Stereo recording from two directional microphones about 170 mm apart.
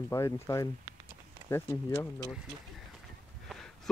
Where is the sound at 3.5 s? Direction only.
Centre (ahead or behind).